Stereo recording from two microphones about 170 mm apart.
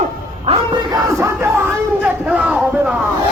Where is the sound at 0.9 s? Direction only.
15° right (ahead or behind).